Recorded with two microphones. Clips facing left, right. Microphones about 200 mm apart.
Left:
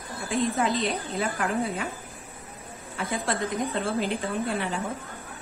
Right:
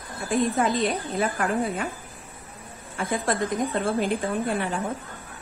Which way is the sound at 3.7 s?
50° right (ahead or behind).